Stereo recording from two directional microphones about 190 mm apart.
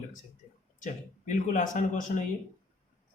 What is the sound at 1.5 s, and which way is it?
Speech, 45° left (ahead or behind).